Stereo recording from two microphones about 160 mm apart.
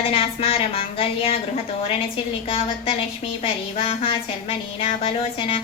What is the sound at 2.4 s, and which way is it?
Speech, 35° left (ahead or behind).